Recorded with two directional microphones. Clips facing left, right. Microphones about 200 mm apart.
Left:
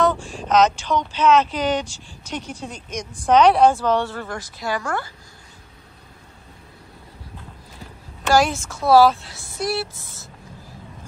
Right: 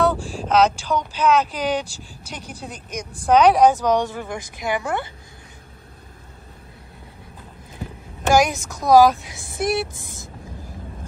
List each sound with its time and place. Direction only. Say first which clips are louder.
0.0 s speech: even; 5° right (ahead or behind); by 5.1 s 20° right (ahead or behind)
8.3 s speech: right 1 dB; 15° right (ahead or behind)